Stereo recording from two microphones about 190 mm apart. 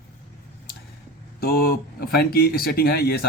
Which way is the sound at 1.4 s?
50° left (ahead or behind).